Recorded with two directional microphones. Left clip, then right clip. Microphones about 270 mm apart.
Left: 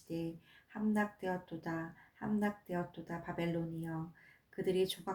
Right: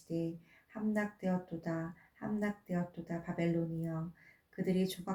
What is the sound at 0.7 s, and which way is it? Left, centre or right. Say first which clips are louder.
Speech: left 1 dB; left.